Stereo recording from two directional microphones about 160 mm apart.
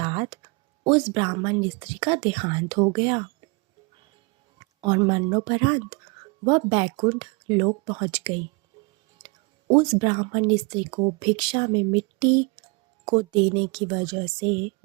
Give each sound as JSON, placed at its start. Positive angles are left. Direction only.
{"t": 0.0, "sound": "speech", "side_deg": -30}
{"t": 4.6, "sound": "speech", "side_deg": -30}